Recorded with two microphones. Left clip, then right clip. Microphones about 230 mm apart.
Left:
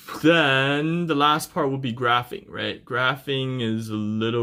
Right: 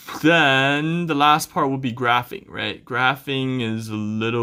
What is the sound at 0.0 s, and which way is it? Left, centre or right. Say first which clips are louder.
Speech: right 2 dB; centre.